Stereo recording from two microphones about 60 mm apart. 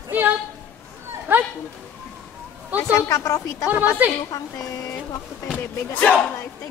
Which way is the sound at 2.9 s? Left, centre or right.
Left.